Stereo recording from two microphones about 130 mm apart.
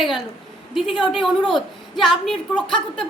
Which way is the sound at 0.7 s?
Centre (ahead or behind).